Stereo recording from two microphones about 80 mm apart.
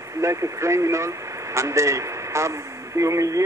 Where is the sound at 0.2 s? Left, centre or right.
Right.